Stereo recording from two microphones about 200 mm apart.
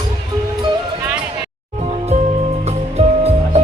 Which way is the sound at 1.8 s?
35° right (ahead or behind).